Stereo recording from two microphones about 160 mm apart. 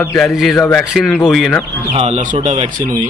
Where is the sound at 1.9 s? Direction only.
45° right (ahead or behind).